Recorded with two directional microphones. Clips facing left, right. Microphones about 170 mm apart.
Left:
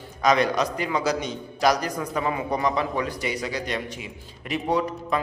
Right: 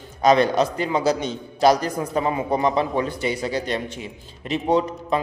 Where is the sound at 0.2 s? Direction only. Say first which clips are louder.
Right 4 dB; 30° right (ahead or behind).